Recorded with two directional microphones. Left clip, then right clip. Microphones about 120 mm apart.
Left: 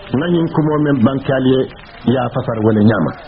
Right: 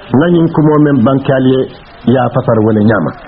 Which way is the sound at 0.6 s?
25° left (ahead or behind).